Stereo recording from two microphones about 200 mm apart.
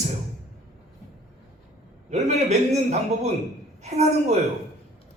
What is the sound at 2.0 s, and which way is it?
Speech, 35° right (ahead or behind).